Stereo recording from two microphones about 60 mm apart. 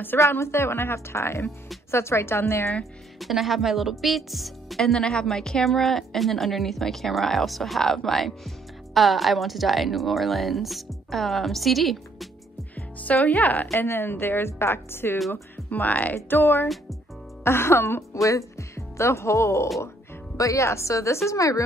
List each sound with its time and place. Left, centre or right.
0.3 s a woman's voice: left
2.8 s a woman's voice: centre
12.7 s music: left
13.7 s speech: left
15.1 s a woman's voice: centre
15.5 s speech: left
16.3 s a woman's voice: left
18.1 s speech: left